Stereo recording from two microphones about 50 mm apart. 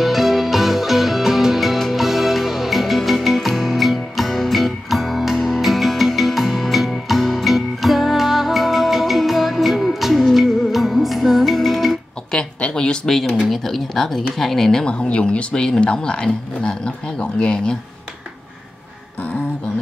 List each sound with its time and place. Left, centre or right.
0.0 s music: centre
12.3 s a sound: left
14.4 s speech: centre